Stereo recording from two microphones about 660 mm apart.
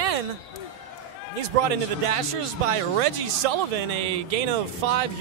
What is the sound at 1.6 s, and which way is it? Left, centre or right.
A man's voice, right.